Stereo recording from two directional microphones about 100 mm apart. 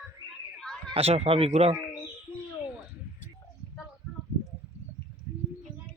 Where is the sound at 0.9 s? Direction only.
90° right.